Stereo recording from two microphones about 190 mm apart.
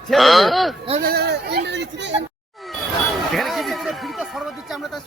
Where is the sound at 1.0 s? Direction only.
55° right (ahead or behind).